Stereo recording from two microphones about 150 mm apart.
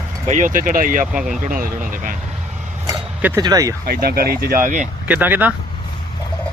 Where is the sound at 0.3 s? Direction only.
55° right (ahead or behind).